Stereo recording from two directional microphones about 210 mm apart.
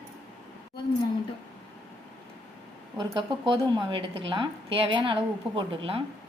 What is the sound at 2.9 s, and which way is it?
A woman's voice, 25° right (ahead or behind).